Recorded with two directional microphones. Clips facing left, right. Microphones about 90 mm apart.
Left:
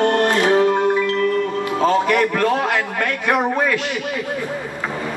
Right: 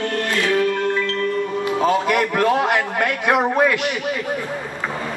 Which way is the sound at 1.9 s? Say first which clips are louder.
Left 3 dB; 15° right (ahead or behind).